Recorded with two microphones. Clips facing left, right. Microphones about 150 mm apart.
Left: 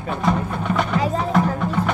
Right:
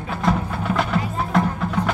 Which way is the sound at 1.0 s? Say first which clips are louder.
Left 5 dB; 90° left.